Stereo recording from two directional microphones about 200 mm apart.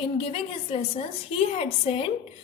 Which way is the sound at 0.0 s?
30° left (ahead or behind).